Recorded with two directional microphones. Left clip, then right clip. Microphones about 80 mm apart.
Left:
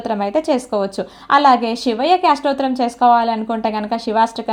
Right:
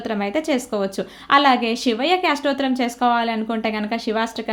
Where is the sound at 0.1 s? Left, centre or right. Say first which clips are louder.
Left 5 dB; centre.